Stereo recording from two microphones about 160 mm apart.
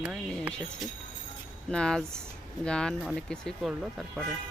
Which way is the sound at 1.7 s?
5° left (ahead or behind).